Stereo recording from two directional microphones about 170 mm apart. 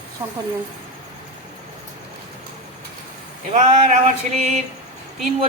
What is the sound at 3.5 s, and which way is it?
A man's voice, 40° right (ahead or behind).